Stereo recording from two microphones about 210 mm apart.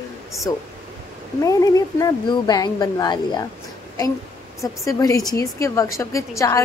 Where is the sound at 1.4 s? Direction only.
15° left (ahead or behind).